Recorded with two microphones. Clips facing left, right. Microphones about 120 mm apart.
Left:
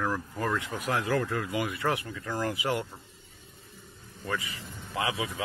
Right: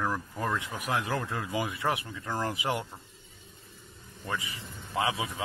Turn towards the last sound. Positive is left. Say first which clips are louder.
# right 1 dB
turn(degrees=-25)  # may be behind; listen again after turning